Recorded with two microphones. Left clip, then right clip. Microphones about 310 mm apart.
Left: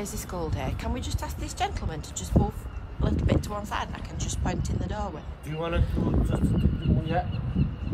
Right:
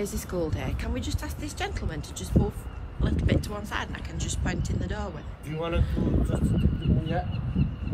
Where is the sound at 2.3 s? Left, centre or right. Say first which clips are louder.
Left 1 dB; centre.